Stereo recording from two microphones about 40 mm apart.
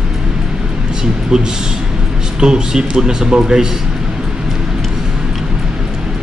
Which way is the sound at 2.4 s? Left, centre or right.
Centre.